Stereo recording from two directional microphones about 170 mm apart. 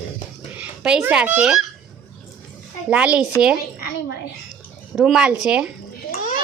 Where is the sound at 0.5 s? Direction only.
5° right (ahead or behind).